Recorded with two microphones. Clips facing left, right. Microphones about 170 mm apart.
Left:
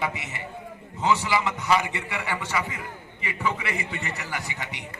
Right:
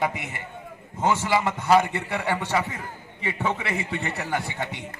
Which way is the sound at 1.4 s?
55° right (ahead or behind).